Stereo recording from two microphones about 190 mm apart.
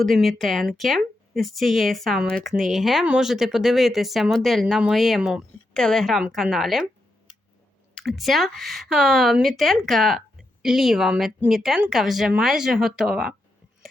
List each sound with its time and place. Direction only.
0.0 s speech: centre (ahead or behind)
7.9 s speech: centre (ahead or behind)